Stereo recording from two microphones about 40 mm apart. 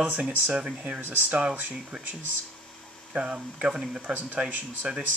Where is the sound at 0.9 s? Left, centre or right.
Right.